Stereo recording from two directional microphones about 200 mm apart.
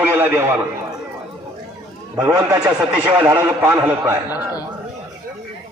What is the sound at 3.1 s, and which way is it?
Speech, 20° right (ahead or behind).